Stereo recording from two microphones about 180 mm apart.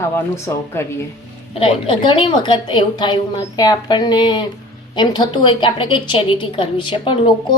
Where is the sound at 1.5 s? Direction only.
30° left (ahead or behind).